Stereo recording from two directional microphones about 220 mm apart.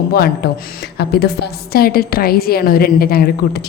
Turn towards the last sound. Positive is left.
turn(degrees=45)  # may be behind; listen again after turning